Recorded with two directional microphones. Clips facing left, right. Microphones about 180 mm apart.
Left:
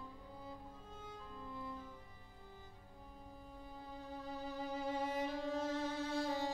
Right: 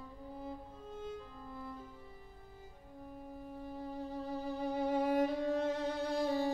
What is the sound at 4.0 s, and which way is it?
Music, 55° right (ahead or behind).